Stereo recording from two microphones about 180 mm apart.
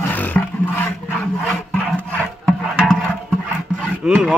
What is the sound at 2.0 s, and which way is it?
Rub, centre (ahead or behind).